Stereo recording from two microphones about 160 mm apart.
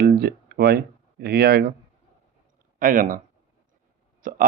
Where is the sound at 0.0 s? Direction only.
75° right (ahead or behind).